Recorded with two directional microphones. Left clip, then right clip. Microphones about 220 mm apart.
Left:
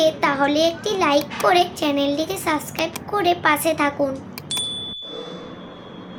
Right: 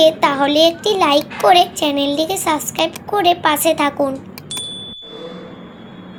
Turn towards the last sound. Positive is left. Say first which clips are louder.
# left 1 dB
turn(degrees=0)  # may be behind; listen again after turning